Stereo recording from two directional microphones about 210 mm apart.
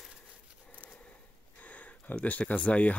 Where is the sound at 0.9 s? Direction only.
5° left (ahead or behind).